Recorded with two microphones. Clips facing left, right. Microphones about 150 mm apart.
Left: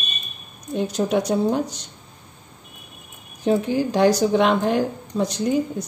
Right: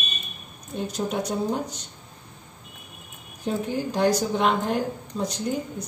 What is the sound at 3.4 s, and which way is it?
A woman's voice, 80° left.